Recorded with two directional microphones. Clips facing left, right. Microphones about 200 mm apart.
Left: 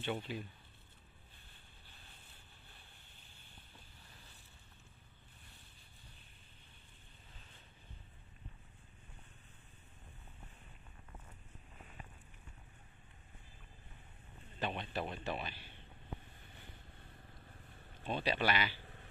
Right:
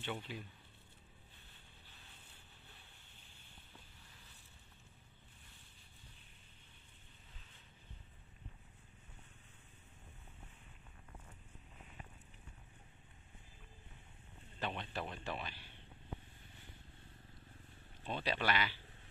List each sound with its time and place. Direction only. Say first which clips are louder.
0.0 s speech: left 4 dB; 35° left (ahead or behind)
14.6 s a sound: left 2 dB; 10° left (ahead or behind)
15.0 s speech: left 3 dB; 20° left (ahead or behind)
18.0 s speech: left 3 dB; 15° left (ahead or behind)